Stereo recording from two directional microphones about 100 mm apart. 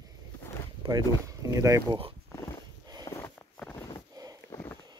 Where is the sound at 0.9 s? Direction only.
35° right (ahead or behind).